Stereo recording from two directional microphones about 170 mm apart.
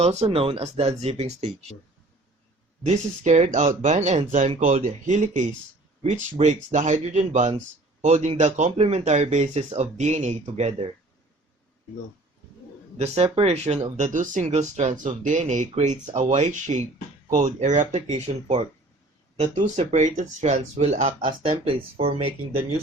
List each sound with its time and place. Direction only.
0.0 s speech: 40° right (ahead or behind)
2.8 s speech: 45° right (ahead or behind)
13.0 s speech: 40° right (ahead or behind)
21.2 s speech: 30° right (ahead or behind)